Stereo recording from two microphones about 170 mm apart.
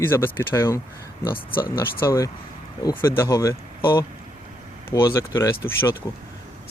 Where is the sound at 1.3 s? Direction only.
60° left (ahead or behind).